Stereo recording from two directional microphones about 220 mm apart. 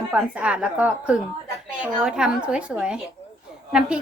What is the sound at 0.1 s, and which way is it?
A woman's voice, 5° right (ahead or behind).